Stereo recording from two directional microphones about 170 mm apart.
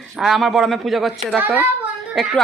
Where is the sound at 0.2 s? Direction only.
Centre (ahead or behind).